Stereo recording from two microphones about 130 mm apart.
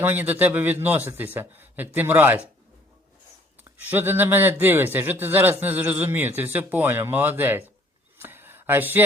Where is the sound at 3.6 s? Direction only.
15° right (ahead or behind).